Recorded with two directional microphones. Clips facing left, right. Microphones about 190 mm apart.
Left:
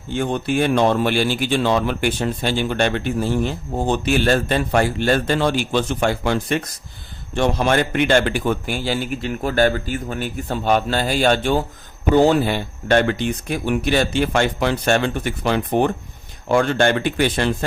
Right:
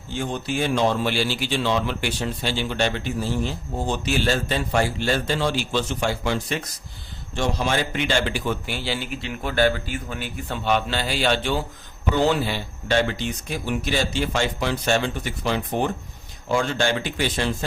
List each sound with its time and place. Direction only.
0.1 s a man's voice: 55° left (ahead or behind)